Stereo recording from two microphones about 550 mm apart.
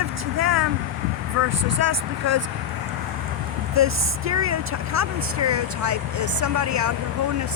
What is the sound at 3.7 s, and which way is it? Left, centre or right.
Speech, right.